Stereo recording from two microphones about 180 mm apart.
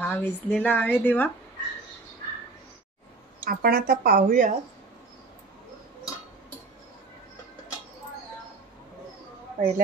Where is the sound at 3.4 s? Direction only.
55° right (ahead or behind).